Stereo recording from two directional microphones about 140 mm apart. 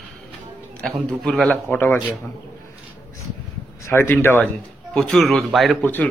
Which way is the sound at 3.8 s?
15° left (ahead or behind).